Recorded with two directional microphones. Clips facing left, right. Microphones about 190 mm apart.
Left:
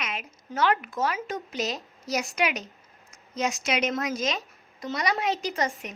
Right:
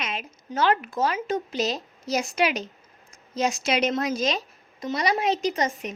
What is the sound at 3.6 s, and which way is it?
A woman's voice, 30° right (ahead or behind).